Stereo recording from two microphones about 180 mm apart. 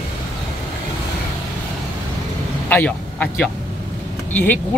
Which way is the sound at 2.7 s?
10° left (ahead or behind).